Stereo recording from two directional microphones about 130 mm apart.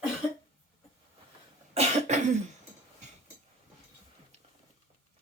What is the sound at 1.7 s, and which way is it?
Cough, 55° right (ahead or behind).